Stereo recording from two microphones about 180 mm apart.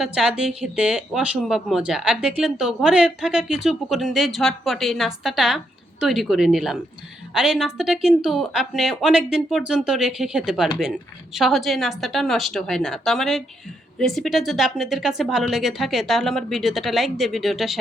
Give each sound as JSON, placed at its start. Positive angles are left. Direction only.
{"t": 0.0, "sound": "speech", "side_deg": -5}